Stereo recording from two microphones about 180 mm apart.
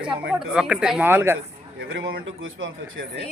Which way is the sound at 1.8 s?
70° right (ahead or behind).